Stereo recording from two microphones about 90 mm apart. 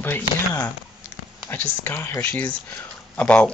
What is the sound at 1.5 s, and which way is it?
Speech, 20° left (ahead or behind).